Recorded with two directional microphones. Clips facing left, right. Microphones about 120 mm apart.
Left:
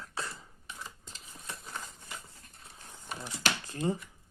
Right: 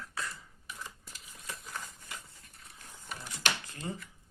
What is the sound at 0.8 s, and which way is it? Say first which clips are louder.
Typewriter: even; 25° left (ahead or behind).